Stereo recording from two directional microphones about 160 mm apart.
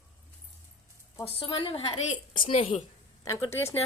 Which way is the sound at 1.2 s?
35° left (ahead or behind).